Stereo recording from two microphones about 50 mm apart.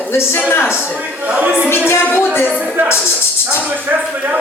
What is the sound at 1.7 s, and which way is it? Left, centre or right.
Speech, left.